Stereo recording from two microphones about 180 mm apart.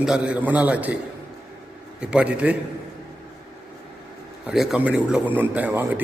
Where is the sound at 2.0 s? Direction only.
5° right (ahead or behind).